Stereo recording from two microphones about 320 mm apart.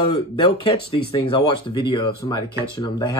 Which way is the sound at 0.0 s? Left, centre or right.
Centre.